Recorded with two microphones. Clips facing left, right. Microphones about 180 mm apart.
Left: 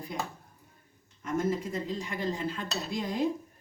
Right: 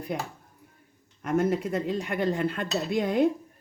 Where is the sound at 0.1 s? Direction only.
60° right (ahead or behind).